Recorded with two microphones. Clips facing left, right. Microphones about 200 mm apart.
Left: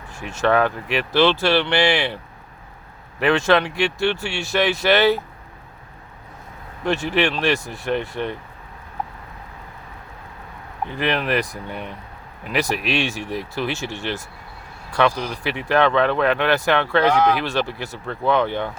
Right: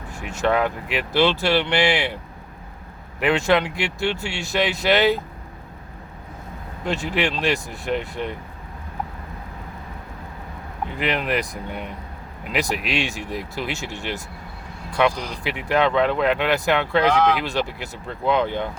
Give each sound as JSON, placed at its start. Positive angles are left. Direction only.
{"t": 0.4, "sound": "speech", "side_deg": -15}
{"t": 3.2, "sound": "speech", "side_deg": -15}
{"t": 6.8, "sound": "speech", "side_deg": -15}
{"t": 11.0, "sound": "speech", "side_deg": -15}
{"t": 17.1, "sound": "speech", "side_deg": 10}
{"t": 17.3, "sound": "speech", "side_deg": -15}